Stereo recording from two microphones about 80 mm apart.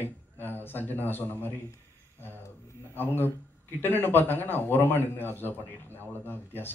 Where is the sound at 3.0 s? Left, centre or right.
Left.